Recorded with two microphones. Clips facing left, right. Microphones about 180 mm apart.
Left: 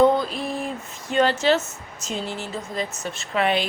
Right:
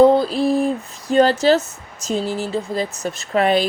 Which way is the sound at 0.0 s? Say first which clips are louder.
Right 6 dB; 35° right (ahead or behind).